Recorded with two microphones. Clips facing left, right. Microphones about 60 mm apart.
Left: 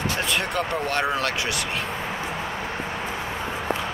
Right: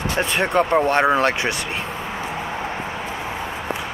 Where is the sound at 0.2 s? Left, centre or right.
Right.